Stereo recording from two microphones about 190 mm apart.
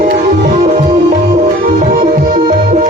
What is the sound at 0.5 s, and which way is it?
Music, 40° right (ahead or behind).